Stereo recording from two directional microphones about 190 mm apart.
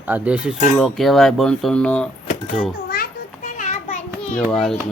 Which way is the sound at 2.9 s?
45° left (ahead or behind).